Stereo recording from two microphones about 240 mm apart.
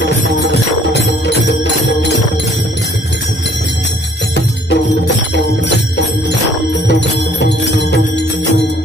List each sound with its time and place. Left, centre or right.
0.0 s music: left
4.6 s music: left
6.9 s jingle bell: left